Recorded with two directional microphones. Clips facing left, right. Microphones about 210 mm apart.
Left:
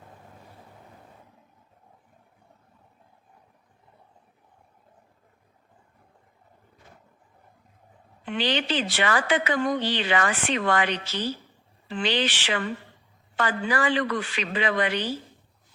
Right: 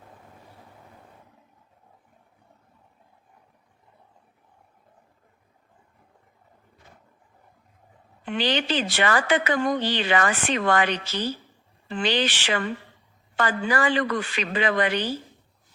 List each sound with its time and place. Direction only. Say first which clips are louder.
8.2 s a woman's voice: right 1 dB; 45° right (ahead or behind)